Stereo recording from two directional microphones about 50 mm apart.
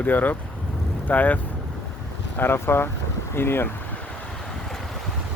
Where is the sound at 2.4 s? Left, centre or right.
Left.